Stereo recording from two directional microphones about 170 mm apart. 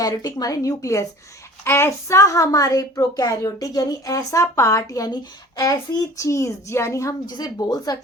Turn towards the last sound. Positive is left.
turn(degrees=20)  # may be behind; listen again after turning